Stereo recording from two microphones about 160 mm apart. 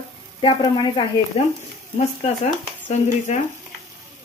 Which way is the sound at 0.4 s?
30° left (ahead or behind).